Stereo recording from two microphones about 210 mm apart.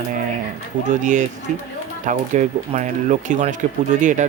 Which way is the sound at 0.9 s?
35° right (ahead or behind).